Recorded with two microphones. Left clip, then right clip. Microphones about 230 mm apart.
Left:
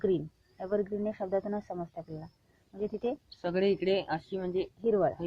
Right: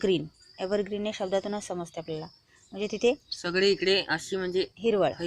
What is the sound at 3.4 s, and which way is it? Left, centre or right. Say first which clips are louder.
Speech: even; centre.